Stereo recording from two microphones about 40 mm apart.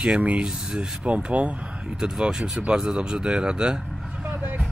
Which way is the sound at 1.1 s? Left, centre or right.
Right.